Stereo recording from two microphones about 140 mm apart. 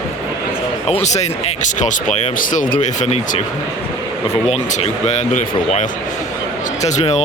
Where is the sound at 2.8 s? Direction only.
60° left (ahead or behind).